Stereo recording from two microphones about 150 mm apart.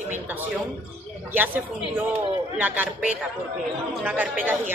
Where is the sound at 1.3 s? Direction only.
10° right (ahead or behind).